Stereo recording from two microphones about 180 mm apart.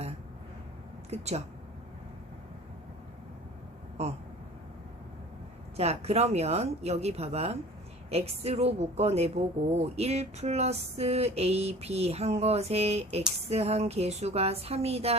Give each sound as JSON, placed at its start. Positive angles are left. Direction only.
{"t": 1.1, "sound": "a woman's voice", "side_deg": -35}
{"t": 4.0, "sound": "a woman's voice", "side_deg": -35}
{"t": 5.7, "sound": "a woman's voice", "side_deg": -35}